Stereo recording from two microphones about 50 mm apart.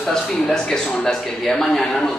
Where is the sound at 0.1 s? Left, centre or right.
Centre.